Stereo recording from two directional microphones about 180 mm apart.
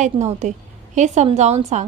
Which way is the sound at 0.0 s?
40° right (ahead or behind).